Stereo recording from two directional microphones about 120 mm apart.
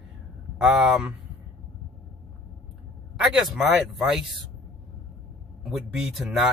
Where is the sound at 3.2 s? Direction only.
5° right (ahead or behind).